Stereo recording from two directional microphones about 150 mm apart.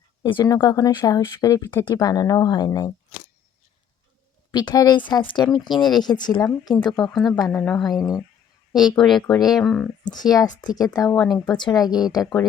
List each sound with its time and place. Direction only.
0.2 s speech: 30° left (ahead or behind)
4.5 s speech: 25° left (ahead or behind)
7.1 s speech: centre (ahead or behind)
7.9 s speech: 25° left (ahead or behind)
9.0 s speech: centre (ahead or behind)
10.0 s speech: 25° left (ahead or behind)